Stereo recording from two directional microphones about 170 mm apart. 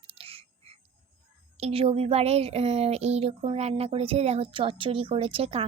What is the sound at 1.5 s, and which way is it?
Speech, 35° right (ahead or behind).